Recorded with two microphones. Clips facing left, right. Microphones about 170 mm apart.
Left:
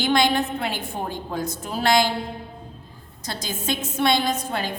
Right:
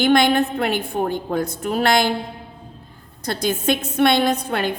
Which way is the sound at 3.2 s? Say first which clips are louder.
Right 8 dB; 60° right (ahead or behind).